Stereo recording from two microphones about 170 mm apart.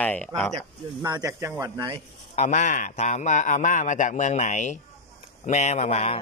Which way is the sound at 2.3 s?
40° left (ahead or behind).